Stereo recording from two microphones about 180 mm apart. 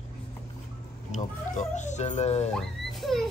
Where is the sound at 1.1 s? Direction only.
40° left (ahead or behind).